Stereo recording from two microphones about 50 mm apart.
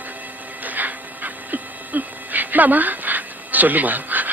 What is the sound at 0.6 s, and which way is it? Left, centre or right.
Dog, right.